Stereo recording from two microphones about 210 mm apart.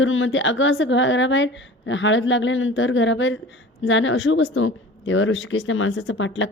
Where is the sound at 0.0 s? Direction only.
65° left (ahead or behind).